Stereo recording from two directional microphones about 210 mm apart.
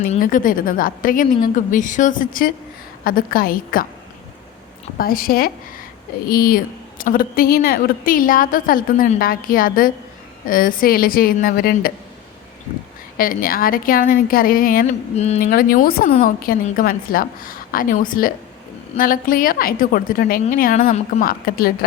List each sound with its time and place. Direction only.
0.0 s a woman's voice: 40° left (ahead or behind)
4.9 s a woman's voice: 45° left (ahead or behind)
13.1 s a woman's voice: 40° left (ahead or behind)
15.1 s a woman's voice: 30° left (ahead or behind)